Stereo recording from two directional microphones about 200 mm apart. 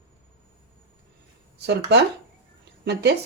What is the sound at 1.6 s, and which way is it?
Speech, 55° right (ahead or behind).